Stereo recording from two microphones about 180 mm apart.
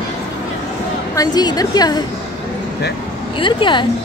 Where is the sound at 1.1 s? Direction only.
20° left (ahead or behind).